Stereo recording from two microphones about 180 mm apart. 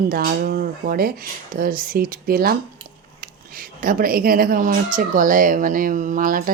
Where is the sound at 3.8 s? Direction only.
50° right (ahead or behind).